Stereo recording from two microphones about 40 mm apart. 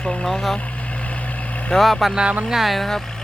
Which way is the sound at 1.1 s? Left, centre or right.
Left.